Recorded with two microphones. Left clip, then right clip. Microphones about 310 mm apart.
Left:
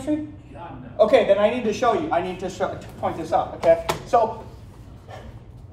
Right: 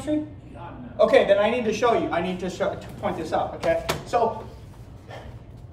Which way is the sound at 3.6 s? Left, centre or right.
Centre.